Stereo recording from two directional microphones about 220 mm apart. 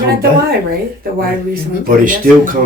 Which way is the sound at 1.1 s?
40° right (ahead or behind).